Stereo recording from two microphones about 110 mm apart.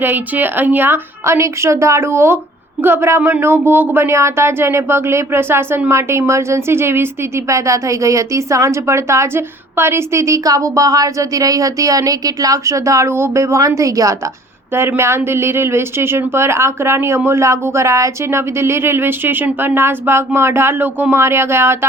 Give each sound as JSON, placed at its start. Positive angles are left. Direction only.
{"t": 0.0, "sound": "speech", "side_deg": -15}